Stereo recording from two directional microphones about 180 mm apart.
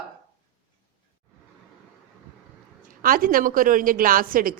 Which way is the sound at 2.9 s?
50° right (ahead or behind).